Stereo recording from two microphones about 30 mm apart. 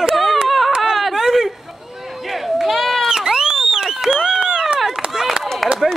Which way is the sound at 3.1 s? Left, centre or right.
Right.